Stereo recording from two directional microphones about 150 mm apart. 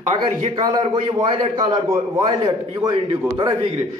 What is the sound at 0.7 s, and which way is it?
A man's voice, 35° right (ahead or behind).